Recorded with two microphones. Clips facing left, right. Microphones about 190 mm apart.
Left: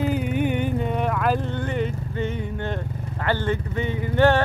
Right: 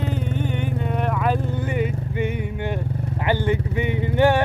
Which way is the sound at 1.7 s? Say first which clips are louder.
Right 2 dB; 10° right (ahead or behind).